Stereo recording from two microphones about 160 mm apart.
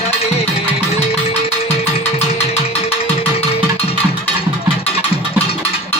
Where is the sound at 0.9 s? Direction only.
40° left (ahead or behind).